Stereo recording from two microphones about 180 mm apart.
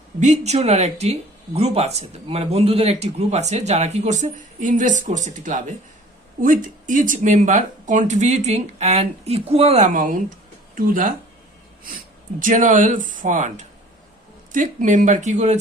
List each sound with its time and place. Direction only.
0.2 s speech: 40° right (ahead or behind)
12.4 s speech: 45° right (ahead or behind)